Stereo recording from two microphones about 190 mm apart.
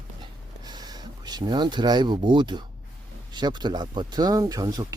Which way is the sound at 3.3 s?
25° right (ahead or behind).